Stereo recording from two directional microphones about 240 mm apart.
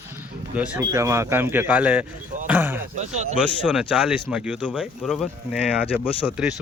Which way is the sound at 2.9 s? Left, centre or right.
Right.